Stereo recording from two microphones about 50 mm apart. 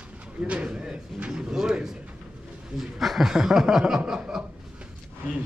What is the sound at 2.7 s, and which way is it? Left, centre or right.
Speech, centre.